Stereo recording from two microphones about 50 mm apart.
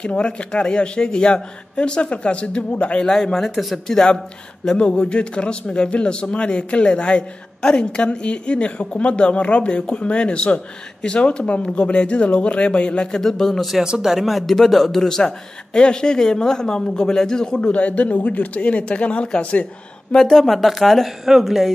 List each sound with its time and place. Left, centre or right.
0.0 s speech: left
3.1 s a man's voice: centre
13.2 s a man's voice: centre
13.8 s a man's voice: centre